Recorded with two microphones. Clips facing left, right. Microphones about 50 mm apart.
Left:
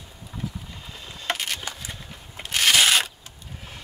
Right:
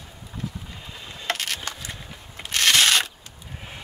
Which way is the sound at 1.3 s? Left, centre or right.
Centre.